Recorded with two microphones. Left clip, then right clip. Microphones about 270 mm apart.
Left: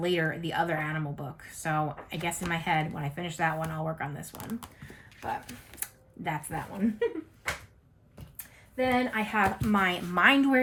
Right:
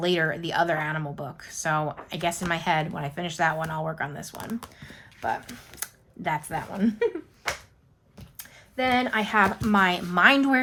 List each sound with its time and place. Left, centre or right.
0.0 s speech: centre
6.2 s speech: centre
8.7 s speech: centre